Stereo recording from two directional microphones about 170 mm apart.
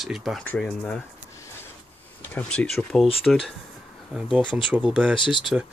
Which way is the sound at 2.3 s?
5° left (ahead or behind).